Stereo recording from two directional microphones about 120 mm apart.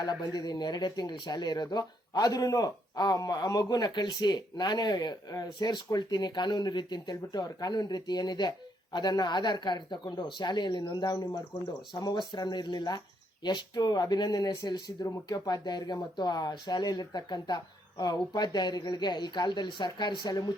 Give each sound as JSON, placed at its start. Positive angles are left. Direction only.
{"t": 0.0, "sound": "speech", "side_deg": 35}